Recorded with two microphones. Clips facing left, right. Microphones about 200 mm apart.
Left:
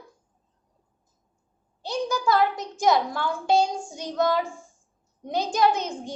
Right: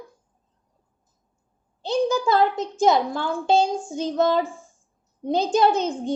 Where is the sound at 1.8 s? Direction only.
25° right (ahead or behind).